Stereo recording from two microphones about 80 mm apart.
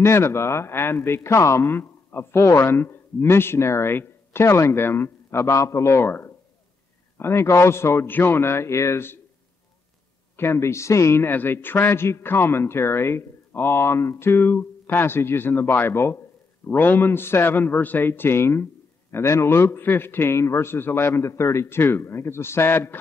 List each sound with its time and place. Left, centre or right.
0.0 s speech: left
10.3 s a man's voice: left